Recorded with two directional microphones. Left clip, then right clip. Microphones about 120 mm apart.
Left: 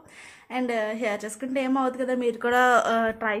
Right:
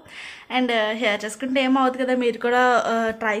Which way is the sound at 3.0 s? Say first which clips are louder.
Right 3 dB; 30° right (ahead or behind).